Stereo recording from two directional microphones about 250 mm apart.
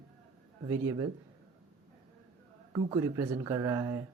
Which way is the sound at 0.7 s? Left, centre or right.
Centre.